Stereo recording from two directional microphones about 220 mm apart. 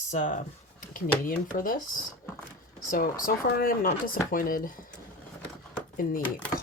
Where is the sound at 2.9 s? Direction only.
40° left (ahead or behind).